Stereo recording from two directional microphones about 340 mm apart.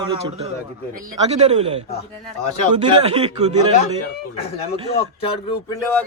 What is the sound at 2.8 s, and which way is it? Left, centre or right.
Speech, centre.